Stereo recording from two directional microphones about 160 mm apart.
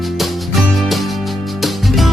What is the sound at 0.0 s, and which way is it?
Music, centre (ahead or behind).